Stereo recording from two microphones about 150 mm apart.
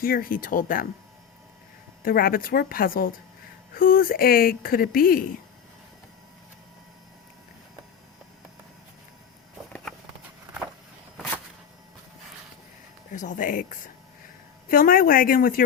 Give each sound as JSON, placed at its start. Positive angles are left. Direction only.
{"t": 0.0, "sound": "speech", "side_deg": 75}
{"t": 2.0, "sound": "speech", "side_deg": 75}
{"t": 13.1, "sound": "speech", "side_deg": 55}